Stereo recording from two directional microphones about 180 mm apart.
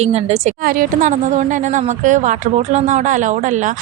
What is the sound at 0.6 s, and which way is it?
A woman's voice, 50° right (ahead or behind).